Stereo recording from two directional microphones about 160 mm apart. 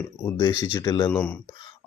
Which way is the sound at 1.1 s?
10° left (ahead or behind).